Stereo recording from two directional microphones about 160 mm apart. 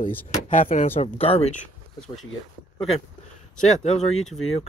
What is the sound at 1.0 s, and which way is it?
Speech, 40° left (ahead or behind).